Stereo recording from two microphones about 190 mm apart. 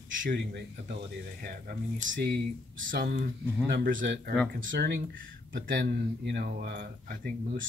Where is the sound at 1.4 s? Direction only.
50° right (ahead or behind).